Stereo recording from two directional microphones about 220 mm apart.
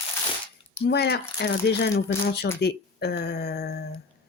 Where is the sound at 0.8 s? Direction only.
45° left (ahead or behind).